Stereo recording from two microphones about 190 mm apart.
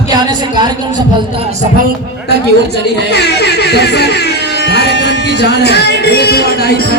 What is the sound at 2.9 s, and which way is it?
Speech, 60° left (ahead or behind).